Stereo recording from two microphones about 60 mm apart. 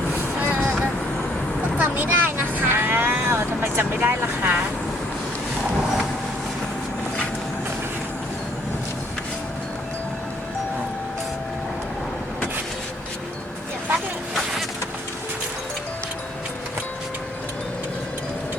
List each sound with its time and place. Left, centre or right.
0.1 s vehicle: right